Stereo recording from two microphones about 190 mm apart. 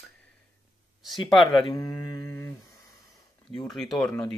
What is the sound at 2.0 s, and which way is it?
Mantra, 20° left (ahead or behind).